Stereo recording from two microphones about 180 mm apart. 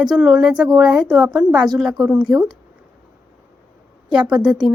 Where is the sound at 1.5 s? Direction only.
25° right (ahead or behind).